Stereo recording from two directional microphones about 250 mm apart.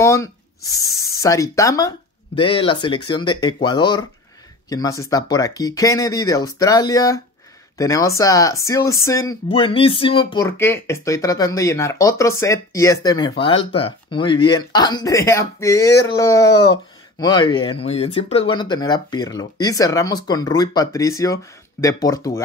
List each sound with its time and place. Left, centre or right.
0.0 s speech: centre